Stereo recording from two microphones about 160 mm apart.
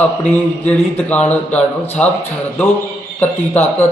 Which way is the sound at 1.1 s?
10° left (ahead or behind).